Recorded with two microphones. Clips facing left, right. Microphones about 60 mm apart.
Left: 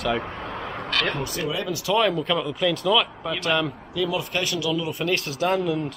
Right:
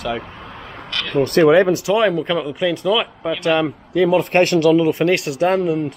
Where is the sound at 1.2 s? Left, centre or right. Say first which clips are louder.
Right 16 dB; right.